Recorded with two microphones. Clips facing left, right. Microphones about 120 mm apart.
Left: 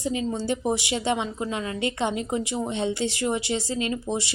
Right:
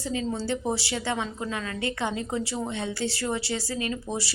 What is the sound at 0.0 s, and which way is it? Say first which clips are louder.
A woman's voice: left 2 dB; 15° left (ahead or behind).